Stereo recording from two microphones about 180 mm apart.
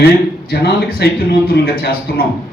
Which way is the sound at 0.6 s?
60° left (ahead or behind).